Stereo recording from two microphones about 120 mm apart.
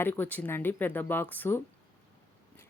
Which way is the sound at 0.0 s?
15° left (ahead or behind).